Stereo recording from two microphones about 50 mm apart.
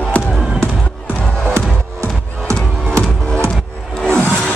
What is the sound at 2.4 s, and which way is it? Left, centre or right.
Music, right.